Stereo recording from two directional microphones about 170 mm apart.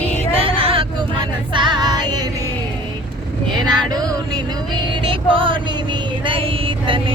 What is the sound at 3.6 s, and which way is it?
Music, 25° right (ahead or behind).